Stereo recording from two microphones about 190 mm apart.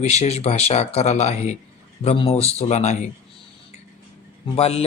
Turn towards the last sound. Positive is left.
turn(degrees=35)  # may be behind; listen again after turning